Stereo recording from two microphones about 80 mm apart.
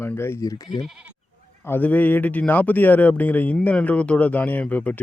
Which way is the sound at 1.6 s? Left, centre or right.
Left.